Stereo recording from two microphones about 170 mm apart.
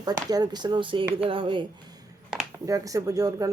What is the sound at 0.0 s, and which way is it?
Speech, 20° right (ahead or behind).